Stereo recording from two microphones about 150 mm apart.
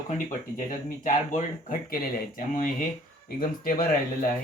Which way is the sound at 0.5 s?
60° left (ahead or behind).